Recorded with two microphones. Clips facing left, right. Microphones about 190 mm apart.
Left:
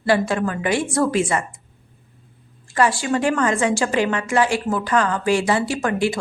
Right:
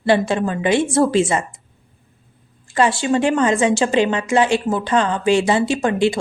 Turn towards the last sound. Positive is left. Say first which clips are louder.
# right 4 dB
turn(degrees=-25)  # may be behind; listen again after turning